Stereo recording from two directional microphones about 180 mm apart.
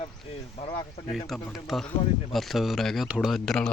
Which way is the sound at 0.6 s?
30° left (ahead or behind).